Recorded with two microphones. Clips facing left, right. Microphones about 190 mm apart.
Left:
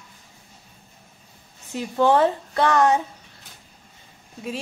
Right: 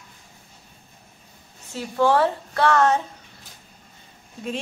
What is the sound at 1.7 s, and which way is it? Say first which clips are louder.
Speech: left 1 dB; 20° left (ahead or behind).